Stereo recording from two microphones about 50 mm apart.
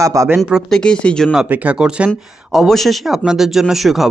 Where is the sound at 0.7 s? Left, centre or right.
Centre.